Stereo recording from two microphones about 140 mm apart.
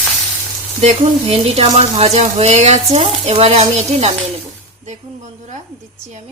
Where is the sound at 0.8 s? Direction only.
50° right (ahead or behind).